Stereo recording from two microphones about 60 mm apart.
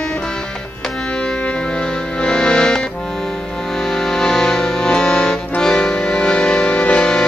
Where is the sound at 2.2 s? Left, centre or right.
Centre.